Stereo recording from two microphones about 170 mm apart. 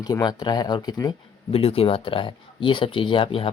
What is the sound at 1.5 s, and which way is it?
Speech, 35° left (ahead or behind).